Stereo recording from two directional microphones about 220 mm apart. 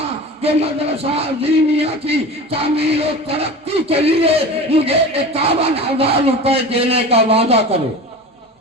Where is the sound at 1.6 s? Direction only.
25° right (ahead or behind).